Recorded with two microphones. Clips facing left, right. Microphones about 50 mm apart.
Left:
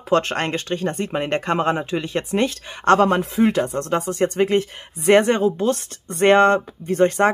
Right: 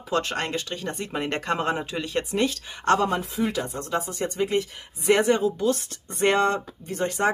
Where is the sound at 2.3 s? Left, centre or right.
Left.